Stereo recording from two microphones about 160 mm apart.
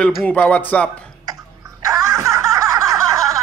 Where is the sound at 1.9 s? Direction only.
20° right (ahead or behind).